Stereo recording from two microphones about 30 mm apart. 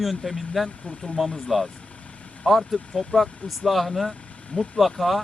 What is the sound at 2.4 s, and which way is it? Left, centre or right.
Speech, centre.